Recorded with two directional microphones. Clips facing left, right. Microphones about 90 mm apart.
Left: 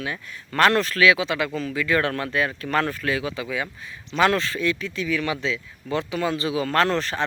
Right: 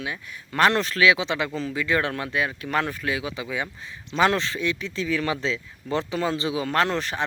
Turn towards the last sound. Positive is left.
turn(degrees=-15)  # may be behind; listen again after turning